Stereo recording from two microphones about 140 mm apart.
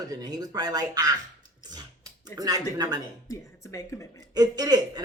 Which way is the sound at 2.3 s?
30° right (ahead or behind).